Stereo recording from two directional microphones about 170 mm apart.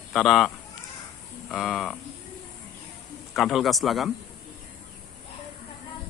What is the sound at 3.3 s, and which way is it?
Speech, centre (ahead or behind).